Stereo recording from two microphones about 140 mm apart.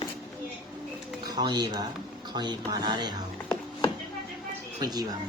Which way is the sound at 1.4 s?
30° right (ahead or behind).